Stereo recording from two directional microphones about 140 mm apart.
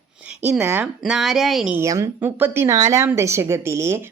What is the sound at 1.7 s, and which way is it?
A woman's voice, 20° right (ahead or behind).